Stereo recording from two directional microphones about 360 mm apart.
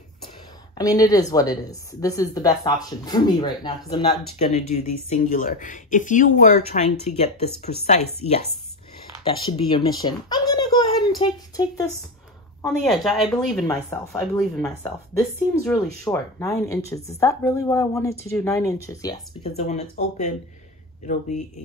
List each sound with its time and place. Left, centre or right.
0.7 s speech: centre